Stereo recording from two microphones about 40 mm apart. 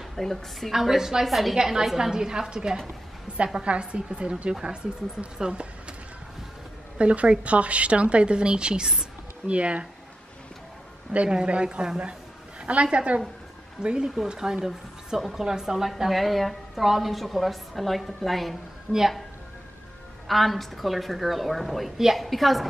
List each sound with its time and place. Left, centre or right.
0.1 s a woman's voice: centre
0.7 s a woman's voice: centre
1.6 s a woman's voice: centre
5.5 s a sound: right
7.0 s a woman's voice: right
11.2 s a woman's voice: right
13.8 s a woman's voice: centre
18.9 s a woman's voice: centre
20.2 s a woman's voice: centre